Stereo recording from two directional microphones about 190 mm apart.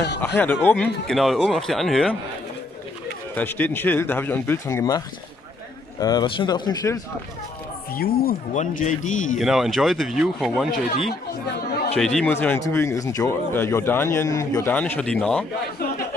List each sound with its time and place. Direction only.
0.4 s speech: 10° left (ahead or behind)
3.3 s speech: 10° left (ahead or behind)
7.9 s speech: 50° left (ahead or behind)
8.5 s a man's voice: 40° left (ahead or behind)
9.4 s speech: centre (ahead or behind)
11.9 s speech: 5° left (ahead or behind)